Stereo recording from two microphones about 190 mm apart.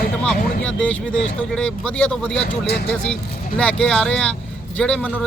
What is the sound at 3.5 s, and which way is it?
Speech, 5° left (ahead or behind).